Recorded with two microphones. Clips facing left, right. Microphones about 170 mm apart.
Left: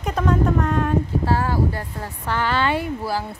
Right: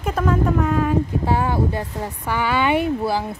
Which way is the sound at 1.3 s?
20° right (ahead or behind).